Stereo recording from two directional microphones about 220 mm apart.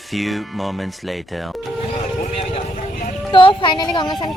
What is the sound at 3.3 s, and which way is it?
Speech, 20° left (ahead or behind).